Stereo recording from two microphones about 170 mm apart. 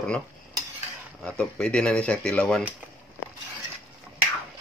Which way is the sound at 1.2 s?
5° left (ahead or behind).